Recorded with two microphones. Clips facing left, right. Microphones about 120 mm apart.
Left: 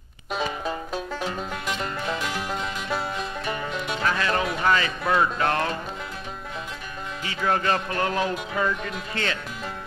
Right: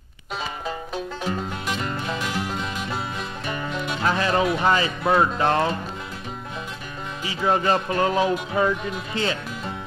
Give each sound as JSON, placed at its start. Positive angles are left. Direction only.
{"t": 4.0, "sound": "speech", "side_deg": -25}
{"t": 7.2, "sound": "speech", "side_deg": -20}